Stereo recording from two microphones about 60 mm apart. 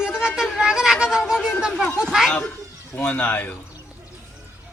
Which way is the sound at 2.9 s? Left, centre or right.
Left.